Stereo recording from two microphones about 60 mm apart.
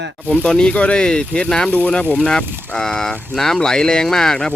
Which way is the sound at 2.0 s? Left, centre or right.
Left.